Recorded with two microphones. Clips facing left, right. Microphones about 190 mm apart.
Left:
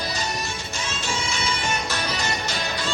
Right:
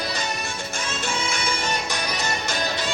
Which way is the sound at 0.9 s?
55° right (ahead or behind).